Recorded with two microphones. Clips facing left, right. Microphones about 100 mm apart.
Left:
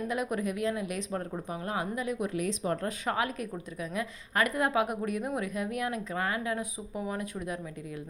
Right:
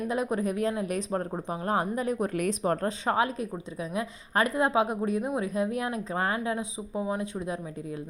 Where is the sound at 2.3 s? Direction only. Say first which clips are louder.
Right 3 dB; 55° right (ahead or behind).